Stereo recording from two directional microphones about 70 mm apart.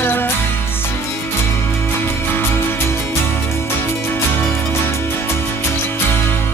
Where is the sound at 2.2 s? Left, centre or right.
Left.